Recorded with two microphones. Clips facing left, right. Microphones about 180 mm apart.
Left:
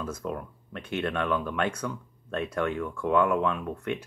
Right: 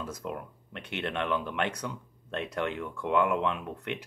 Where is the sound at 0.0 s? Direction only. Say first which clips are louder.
Left 3 dB; 15° right (ahead or behind).